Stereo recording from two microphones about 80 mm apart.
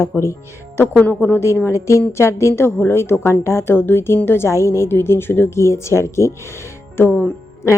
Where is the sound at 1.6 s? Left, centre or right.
Left.